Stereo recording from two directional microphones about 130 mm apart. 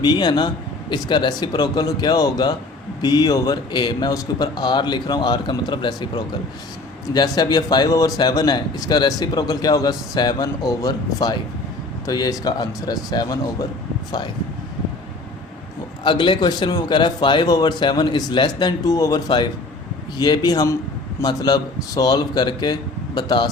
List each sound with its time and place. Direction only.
0.0 s a man's voice: 35° left (ahead or behind)
16.0 s a man's voice: 35° left (ahead or behind)